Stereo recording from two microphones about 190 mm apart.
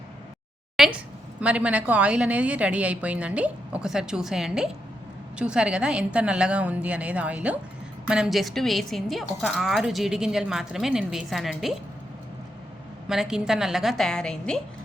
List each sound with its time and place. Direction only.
0.8 s a woman's voice: centre (ahead or behind)
13.1 s a woman's voice: 5° right (ahead or behind)